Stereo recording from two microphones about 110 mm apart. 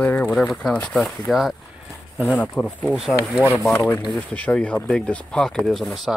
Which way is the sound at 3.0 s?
Centre (ahead or behind).